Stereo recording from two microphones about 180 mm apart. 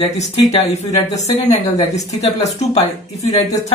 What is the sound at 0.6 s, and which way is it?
Speech, 35° left (ahead or behind).